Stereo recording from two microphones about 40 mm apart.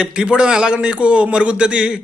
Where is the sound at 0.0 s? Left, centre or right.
Right.